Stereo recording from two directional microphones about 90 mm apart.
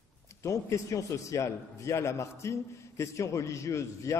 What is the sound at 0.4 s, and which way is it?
A man's voice, 35° left (ahead or behind).